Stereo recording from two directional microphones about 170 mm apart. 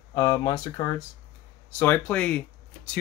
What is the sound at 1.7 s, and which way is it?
Speech, 10° left (ahead or behind).